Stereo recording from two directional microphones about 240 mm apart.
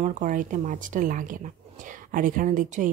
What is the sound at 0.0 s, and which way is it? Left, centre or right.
Speech, right.